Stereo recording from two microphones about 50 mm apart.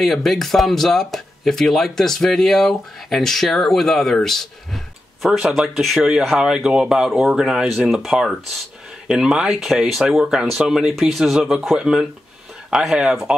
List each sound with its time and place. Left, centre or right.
0.0 s speech: centre
5.6 s speech: centre